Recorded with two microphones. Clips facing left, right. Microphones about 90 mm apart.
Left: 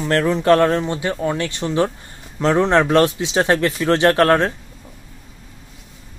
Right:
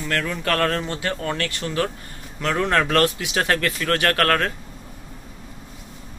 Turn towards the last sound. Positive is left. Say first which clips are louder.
# left 6 dB
turn(degrees=25)  # may be behind; listen again after turning